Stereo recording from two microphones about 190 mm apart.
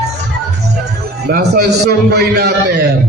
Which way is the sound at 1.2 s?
55° right (ahead or behind).